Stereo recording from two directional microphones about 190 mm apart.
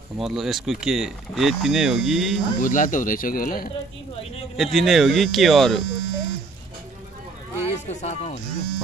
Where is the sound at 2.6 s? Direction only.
45° left (ahead or behind).